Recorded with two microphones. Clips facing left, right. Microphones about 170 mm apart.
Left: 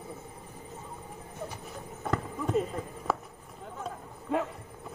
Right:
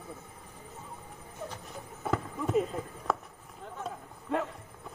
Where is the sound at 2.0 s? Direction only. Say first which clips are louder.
Even; 5° right (ahead or behind).